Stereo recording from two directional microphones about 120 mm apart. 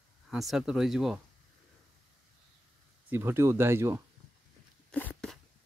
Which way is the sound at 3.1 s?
20° right (ahead or behind).